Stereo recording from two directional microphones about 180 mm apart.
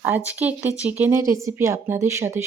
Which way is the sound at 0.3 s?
10° right (ahead or behind).